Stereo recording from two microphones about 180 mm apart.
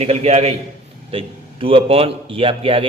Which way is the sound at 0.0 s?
35° right (ahead or behind).